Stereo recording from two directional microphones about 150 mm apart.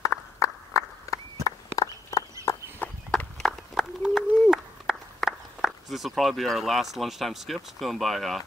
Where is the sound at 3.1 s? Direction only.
5° left (ahead or behind).